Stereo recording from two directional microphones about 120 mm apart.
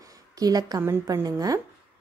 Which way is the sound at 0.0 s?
30° right (ahead or behind).